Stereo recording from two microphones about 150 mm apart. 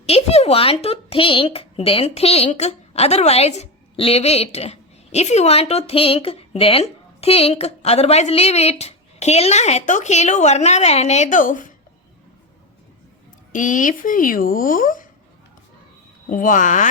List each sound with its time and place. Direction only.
0.0 s a woman's voice: 45° left (ahead or behind); by 11.7 s 60° left (ahead or behind)
13.5 s speech: 60° left (ahead or behind)
16.3 s speech: 60° left (ahead or behind)